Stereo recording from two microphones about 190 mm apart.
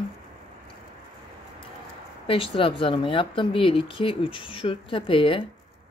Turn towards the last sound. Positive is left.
turn(degrees=30)  # may be behind; listen again after turning